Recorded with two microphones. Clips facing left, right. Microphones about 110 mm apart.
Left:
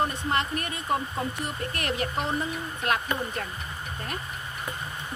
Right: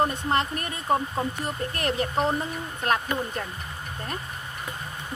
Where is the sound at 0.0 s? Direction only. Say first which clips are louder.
Right 3 dB; 35° right (ahead or behind).